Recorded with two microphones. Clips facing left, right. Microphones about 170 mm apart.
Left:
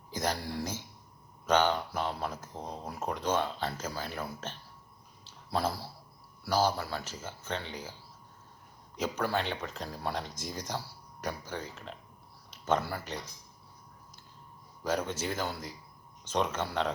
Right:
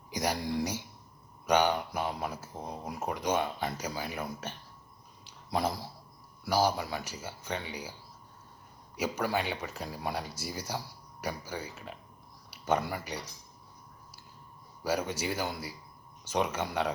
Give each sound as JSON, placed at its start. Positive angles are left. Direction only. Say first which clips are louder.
{"t": 0.1, "sound": "speech", "louder": "right 2 dB", "side_deg": -15}
{"t": 5.2, "sound": "a sound", "louder": "right 1 dB", "side_deg": -15}
{"t": 6.4, "sound": "speech", "louder": "right 1 dB", "side_deg": -10}
{"t": 9.0, "sound": "speech", "louder": "even", "side_deg": -10}
{"t": 14.8, "sound": "speech", "louder": "right 1 dB", "side_deg": -10}